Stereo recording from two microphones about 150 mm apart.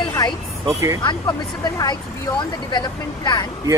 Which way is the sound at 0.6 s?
20° right (ahead or behind).